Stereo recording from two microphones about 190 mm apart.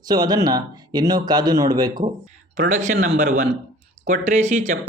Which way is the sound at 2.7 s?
40° right (ahead or behind).